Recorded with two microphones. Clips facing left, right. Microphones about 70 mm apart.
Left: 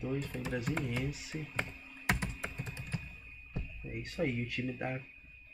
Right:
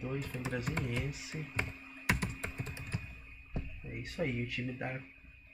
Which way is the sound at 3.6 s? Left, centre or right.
Right.